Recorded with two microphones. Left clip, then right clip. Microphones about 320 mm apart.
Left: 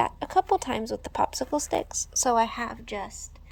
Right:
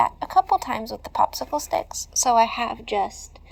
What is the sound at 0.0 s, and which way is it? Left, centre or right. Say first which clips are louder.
Speech: right 5 dB; left.